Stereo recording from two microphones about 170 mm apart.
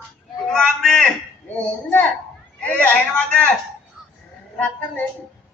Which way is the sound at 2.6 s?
10° left (ahead or behind).